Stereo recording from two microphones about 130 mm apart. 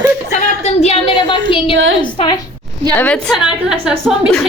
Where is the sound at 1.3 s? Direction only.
40° left (ahead or behind).